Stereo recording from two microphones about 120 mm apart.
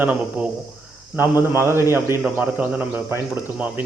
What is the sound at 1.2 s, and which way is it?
A man's voice, 20° right (ahead or behind).